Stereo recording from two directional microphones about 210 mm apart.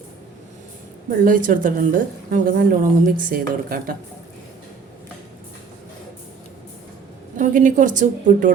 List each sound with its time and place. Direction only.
1.2 s a woman's voice: 40° right (ahead or behind)
7.3 s a woman's voice: 40° right (ahead or behind)